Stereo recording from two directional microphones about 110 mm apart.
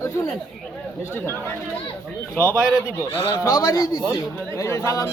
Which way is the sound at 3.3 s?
30° left (ahead or behind).